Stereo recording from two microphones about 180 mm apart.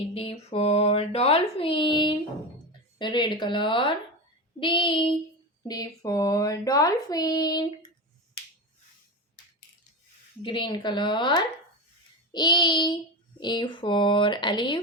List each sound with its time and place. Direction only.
0.0 s speech: 35° left (ahead or behind)
10.4 s speech: 25° left (ahead or behind)